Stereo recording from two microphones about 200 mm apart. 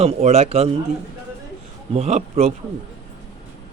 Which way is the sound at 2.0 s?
30° right (ahead or behind).